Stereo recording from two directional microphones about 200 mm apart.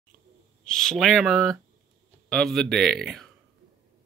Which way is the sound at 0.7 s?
Centre (ahead or behind).